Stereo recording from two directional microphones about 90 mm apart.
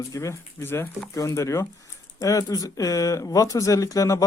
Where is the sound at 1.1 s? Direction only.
35° left (ahead or behind).